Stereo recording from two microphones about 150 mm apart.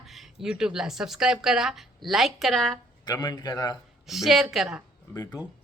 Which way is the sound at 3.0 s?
25° left (ahead or behind).